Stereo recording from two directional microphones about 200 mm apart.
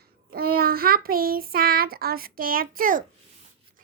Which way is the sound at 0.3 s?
50° right (ahead or behind).